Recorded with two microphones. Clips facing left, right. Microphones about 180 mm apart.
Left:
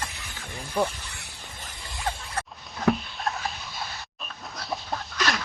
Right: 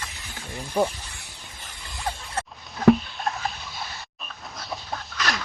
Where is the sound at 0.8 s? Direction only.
20° right (ahead or behind).